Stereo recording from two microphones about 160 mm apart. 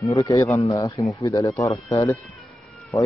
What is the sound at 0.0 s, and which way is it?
Speech, 20° left (ahead or behind).